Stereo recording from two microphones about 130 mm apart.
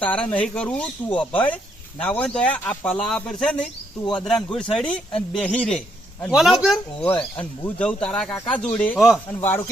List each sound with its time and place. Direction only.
0.0 s speech: 10° left (ahead or behind)
9.0 s speech: centre (ahead or behind)
9.4 s speech: 15° left (ahead or behind)